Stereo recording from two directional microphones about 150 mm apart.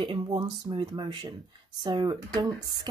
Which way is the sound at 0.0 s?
35° right (ahead or behind).